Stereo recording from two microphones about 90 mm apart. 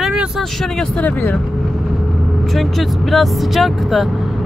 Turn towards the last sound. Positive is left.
turn(degrees=0)  # may be behind; listen again after turning